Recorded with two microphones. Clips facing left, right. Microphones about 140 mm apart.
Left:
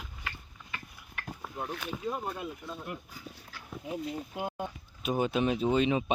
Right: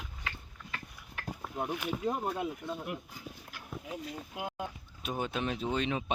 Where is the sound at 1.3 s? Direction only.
10° right (ahead or behind).